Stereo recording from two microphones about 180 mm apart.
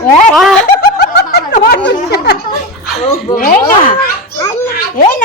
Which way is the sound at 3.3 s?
50° left (ahead or behind).